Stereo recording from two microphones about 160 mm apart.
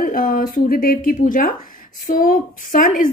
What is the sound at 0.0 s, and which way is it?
A woman's voice, 60° left (ahead or behind).